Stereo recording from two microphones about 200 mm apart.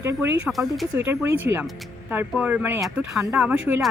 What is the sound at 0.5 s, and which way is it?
Speech, centre (ahead or behind).